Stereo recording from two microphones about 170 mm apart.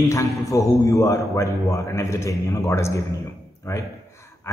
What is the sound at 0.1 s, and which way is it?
A man's voice, 20° left (ahead or behind).